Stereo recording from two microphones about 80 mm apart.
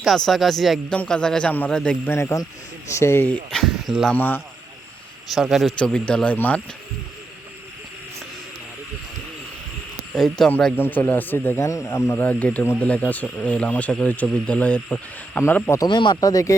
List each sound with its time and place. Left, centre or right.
0.3 s speech: centre
0.9 s speech: centre
2.0 s speech: left
3.5 s speech: centre
4.1 s speech: left
5.3 s speech: centre
5.8 s speech: centre
10.2 s speech: centre
10.8 s speech: left
11.7 s speech: left
12.1 s speech: left
15.4 s speech: left
15.9 s speech: left
16.2 s speech: left